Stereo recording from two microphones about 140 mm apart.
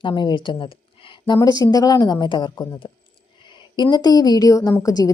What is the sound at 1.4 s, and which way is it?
A woman's voice, 25° left (ahead or behind).